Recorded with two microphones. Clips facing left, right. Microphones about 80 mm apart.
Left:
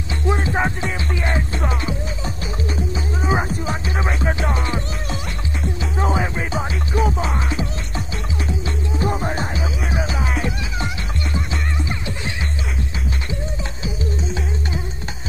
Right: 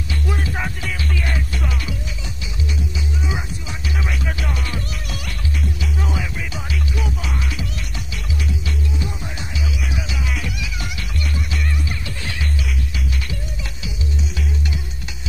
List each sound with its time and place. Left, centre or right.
0.3 s music: left
13.8 s music: left